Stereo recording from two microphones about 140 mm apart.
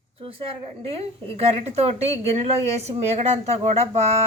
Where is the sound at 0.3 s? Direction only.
40° right (ahead or behind).